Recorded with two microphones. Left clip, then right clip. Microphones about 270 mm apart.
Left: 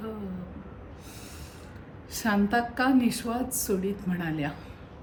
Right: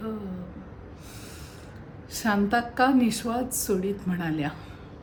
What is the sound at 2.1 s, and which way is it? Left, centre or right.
A woman's voice, centre.